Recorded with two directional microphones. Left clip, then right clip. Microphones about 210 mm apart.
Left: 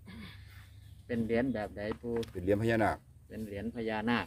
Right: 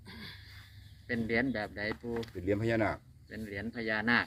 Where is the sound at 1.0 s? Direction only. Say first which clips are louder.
Even; 25° left (ahead or behind).